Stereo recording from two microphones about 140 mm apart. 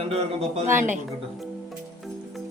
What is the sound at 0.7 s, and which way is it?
Speech, 15° right (ahead or behind).